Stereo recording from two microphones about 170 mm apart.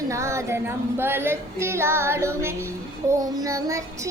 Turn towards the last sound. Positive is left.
turn(degrees=-20)  # may be behind; listen again after turning